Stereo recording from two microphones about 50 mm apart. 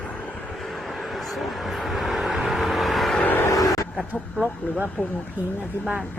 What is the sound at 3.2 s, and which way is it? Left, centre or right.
Vehicle, left.